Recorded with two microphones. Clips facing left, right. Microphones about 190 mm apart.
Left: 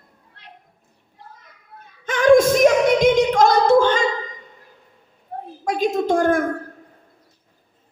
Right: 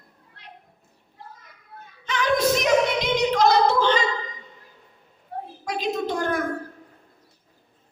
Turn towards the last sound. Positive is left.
turn(degrees=45)  # may be behind; listen again after turning